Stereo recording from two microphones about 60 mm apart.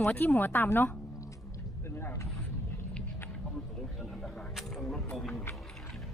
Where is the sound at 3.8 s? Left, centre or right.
Centre.